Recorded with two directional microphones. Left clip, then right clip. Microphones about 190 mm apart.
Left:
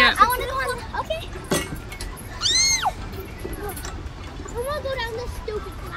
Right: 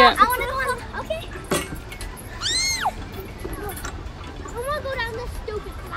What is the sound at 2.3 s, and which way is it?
Music, 10° right (ahead or behind).